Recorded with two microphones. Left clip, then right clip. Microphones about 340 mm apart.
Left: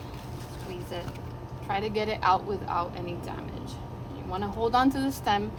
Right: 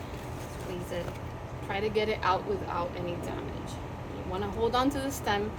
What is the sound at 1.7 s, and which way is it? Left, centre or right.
Speech, centre.